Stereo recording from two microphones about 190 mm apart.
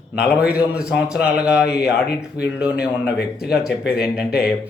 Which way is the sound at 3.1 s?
60° left (ahead or behind).